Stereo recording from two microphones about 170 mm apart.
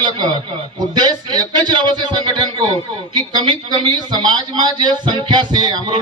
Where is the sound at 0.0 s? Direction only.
25° right (ahead or behind).